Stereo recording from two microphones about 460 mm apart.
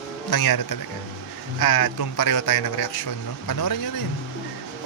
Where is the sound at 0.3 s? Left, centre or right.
Left.